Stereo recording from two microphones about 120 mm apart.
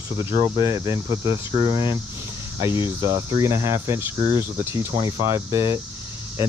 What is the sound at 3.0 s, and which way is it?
Speech, 25° right (ahead or behind).